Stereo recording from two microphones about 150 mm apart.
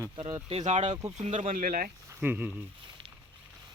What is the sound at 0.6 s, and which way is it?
Speech, 50° right (ahead or behind).